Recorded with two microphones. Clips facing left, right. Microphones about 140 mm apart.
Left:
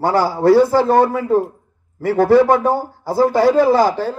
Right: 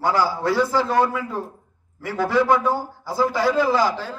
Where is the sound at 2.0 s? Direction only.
55° left (ahead or behind).